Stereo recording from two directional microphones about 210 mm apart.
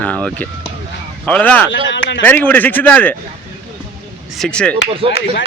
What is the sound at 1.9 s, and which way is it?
Speech, 60° left (ahead or behind).